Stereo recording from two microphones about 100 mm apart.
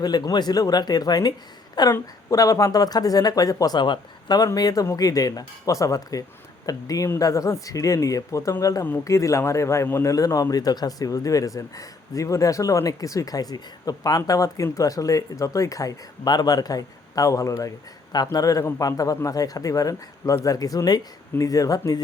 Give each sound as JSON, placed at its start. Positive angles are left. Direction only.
{"t": 0.0, "sound": "a man's voice", "side_deg": 40}
{"t": 3.8, "sound": "a man's voice", "side_deg": 50}